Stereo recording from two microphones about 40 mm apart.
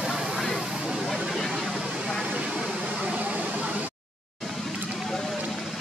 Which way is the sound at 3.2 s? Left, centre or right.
Right.